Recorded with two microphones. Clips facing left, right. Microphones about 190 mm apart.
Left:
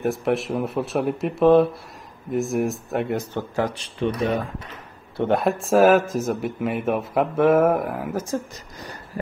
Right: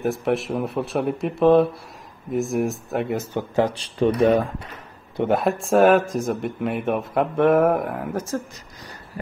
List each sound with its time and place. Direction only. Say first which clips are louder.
0.0 s speech: even; centre (ahead or behind)
3.3 s speech: right 3 dB; 25° right (ahead or behind)
5.3 s speech: even; centre (ahead or behind)